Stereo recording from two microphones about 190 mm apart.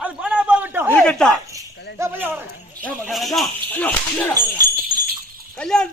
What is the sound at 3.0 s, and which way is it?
Speech, centre (ahead or behind).